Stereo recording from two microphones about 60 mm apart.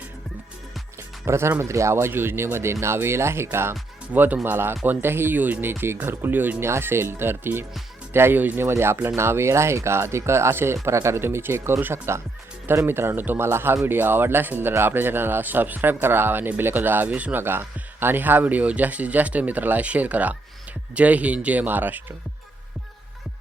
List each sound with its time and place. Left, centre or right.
1.2 s speech: right
4.1 s speech: right
4.4 s speech: right
6.6 s speech: right
17.1 s speech: right
17.3 s speech: right